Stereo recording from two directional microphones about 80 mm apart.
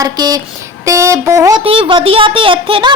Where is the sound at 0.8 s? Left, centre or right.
Right.